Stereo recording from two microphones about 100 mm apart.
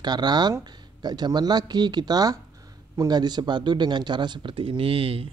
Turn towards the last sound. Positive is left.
turn(degrees=-70)  # may be behind; listen again after turning